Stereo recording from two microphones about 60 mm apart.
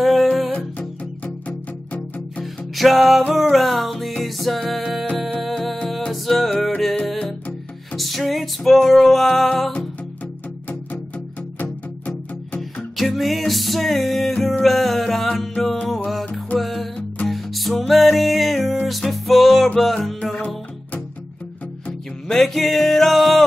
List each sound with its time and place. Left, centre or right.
0.0 s music: centre
0.5 s music: left
2.7 s music: centre
7.9 s music: centre
12.9 s music: centre
16.5 s music: centre
20.3 s music: left
22.3 s music: centre